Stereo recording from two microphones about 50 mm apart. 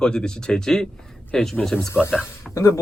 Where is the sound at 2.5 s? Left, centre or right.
Left.